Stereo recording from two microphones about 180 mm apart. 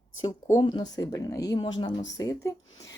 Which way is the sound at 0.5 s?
25° left (ahead or behind).